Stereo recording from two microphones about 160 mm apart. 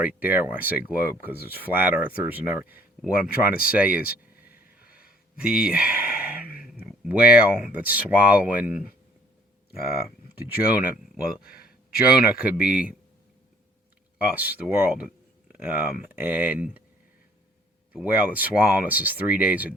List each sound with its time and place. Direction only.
0.0 s speech: 10° right (ahead or behind)
3.5 s speech: 65° left (ahead or behind)
3.8 s speech: 10° right (ahead or behind)
5.4 s speech: 5° right (ahead or behind)
11.3 s speech: 70° left (ahead or behind)
12.1 s speech: 5° right (ahead or behind)
14.2 s speech: 10° right (ahead or behind)
17.9 s speech: 10° right (ahead or behind)